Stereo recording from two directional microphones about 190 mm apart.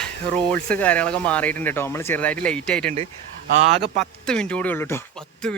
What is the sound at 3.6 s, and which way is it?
Speech, 35° right (ahead or behind).